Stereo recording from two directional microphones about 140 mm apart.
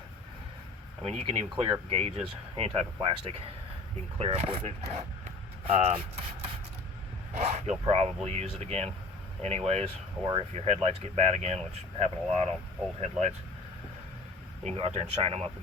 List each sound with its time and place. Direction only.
1.0 s speech: 45° right (ahead or behind)
2.0 s speech: 45° right (ahead or behind)
14.6 s speech: 50° right (ahead or behind)